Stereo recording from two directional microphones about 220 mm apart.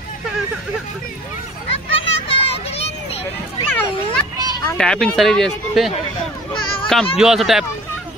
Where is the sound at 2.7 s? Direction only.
25° left (ahead or behind).